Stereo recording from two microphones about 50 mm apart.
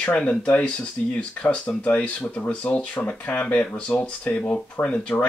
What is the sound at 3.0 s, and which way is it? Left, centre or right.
Speech, left.